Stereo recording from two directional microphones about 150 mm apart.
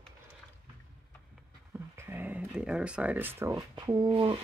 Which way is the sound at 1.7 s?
15° right (ahead or behind).